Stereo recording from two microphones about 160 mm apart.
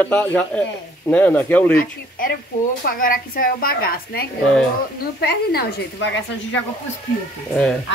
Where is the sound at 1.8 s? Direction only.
65° left (ahead or behind); by 6.1 s 80° left.